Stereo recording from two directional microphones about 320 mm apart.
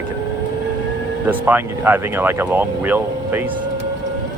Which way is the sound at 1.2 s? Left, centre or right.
Centre.